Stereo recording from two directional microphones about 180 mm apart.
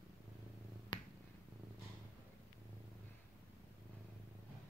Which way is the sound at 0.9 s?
25° left (ahead or behind).